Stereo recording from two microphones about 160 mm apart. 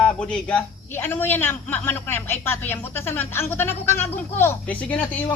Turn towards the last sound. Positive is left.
turn(degrees=10)  # may be behind; listen again after turning